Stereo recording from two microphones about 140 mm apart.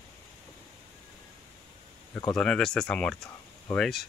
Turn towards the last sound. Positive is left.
turn(degrees=5)  # may be behind; listen again after turning